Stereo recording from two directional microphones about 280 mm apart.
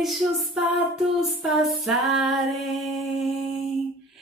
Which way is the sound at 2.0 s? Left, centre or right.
Centre.